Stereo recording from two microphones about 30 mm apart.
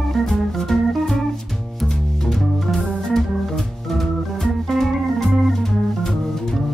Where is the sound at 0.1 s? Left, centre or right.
Centre.